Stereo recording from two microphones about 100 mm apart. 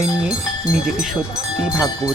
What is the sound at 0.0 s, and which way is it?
Speech, 10° right (ahead or behind).